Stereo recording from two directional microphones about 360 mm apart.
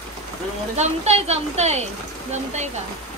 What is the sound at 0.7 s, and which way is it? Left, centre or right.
A woman's voice, centre.